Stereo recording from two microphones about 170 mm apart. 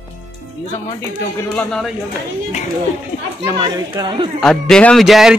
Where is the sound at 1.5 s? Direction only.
5° left (ahead or behind).